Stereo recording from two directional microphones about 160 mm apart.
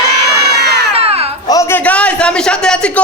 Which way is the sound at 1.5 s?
20° left (ahead or behind).